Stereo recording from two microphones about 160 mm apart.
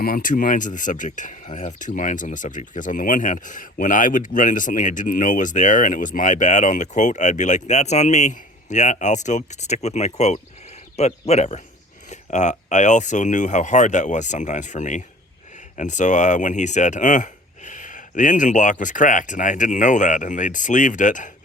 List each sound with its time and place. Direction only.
0.0 s speech: 60° left (ahead or behind)